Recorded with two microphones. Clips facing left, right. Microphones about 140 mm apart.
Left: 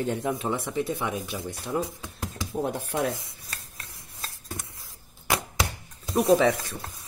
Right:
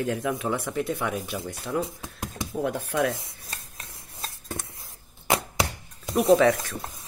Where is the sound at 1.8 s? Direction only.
20° right (ahead or behind).